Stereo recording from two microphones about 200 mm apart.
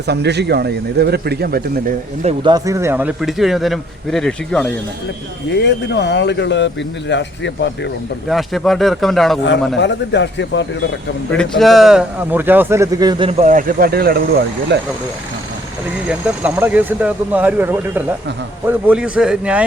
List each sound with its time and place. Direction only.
0.1 s speech: 55° right (ahead or behind)
2.2 s speech: 25° right (ahead or behind); by 4.7 s 5° left (ahead or behind)
5.5 s a man's voice: 60° left (ahead or behind)
8.3 s speech: centre (ahead or behind)
9.5 s a man's voice: 60° left (ahead or behind)
11.3 s speech: 5° left (ahead or behind); by 14.8 s 60° right (ahead or behind)
16.0 s speech: 5° right (ahead or behind)